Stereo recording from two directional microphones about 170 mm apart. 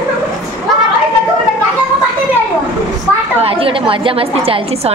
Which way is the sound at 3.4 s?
35° right (ahead or behind).